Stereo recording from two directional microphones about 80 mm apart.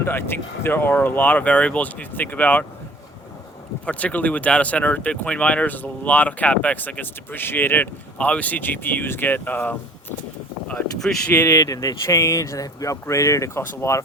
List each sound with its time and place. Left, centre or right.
0.0 s speech: left
3.8 s speech: centre
10.7 s speech: centre
11.4 s speech: left
12.0 s speech: left